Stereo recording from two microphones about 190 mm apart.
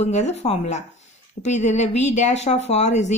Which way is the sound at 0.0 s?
35° left (ahead or behind).